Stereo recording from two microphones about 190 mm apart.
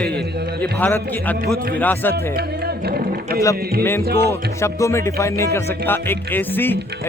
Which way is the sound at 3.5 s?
55° right (ahead or behind).